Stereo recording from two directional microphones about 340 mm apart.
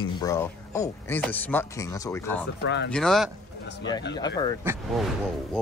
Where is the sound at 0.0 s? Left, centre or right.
Centre.